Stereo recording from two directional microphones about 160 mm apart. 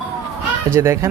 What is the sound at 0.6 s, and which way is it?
Speech, 15° right (ahead or behind).